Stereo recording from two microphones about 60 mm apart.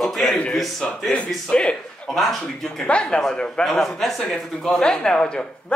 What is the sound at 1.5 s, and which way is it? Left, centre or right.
Speech, centre.